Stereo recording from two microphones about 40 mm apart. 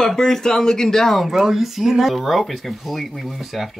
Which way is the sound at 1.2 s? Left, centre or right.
Centre.